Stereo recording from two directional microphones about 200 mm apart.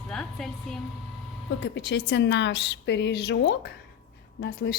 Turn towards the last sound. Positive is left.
turn(degrees=55)  # may be behind; listen again after turning